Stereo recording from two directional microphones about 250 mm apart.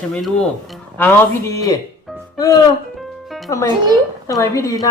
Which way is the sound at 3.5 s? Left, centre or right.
Centre.